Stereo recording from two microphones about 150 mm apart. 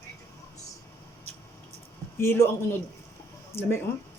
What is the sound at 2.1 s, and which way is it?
A man's voice, 15° left (ahead or behind).